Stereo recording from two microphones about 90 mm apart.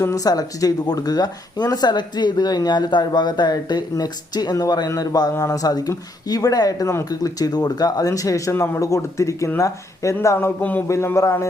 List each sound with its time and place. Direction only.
0.0 s a man's voice: 40° left (ahead or behind); by 10.8 s 20° left (ahead or behind)
10.8 s speech: 30° left (ahead or behind)